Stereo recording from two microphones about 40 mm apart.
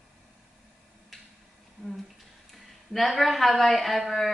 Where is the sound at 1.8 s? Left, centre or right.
Centre.